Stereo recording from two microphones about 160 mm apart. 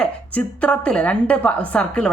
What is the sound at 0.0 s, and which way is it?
A woman's voice, 10° left (ahead or behind).